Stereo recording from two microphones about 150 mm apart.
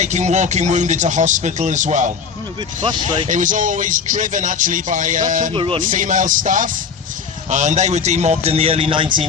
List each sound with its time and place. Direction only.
0.0 s a man's voice: 50° right (ahead or behind)
2.8 s speech: 30° right (ahead or behind)
3.2 s speech: 60° right (ahead or behind)
5.5 s speech: 35° right (ahead or behind)
5.8 s a man's voice: 60° right (ahead or behind); by 9.2 s 35° right (ahead or behind)